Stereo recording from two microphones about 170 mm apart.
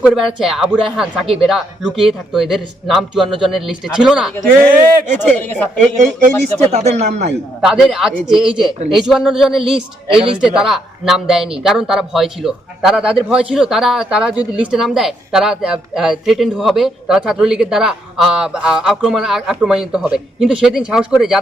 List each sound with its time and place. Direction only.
0.0 s a man's voice: centre (ahead or behind)
5.3 s speech: 10° left (ahead or behind)
6.0 s speech: 45° right (ahead or behind)
7.6 s a man's voice: centre (ahead or behind)